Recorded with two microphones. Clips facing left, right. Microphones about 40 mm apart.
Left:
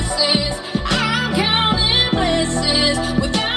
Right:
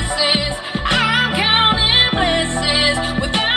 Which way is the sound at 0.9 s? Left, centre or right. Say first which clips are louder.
Right 3 dB; right.